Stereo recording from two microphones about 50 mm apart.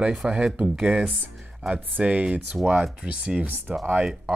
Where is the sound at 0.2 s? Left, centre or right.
Centre.